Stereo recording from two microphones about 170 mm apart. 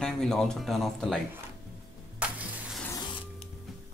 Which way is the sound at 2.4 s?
10° right (ahead or behind).